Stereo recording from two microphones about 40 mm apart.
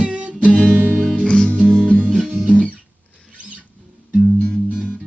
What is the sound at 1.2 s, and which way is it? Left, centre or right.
Music, left.